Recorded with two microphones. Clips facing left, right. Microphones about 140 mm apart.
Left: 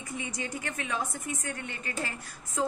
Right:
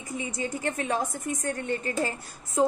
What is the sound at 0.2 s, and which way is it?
A woman's voice, 30° right (ahead or behind).